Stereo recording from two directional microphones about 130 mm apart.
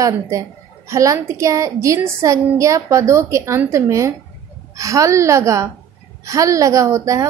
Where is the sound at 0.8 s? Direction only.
25° right (ahead or behind).